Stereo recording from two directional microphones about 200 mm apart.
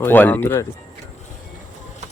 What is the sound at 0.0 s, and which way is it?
Speech, 10° left (ahead or behind).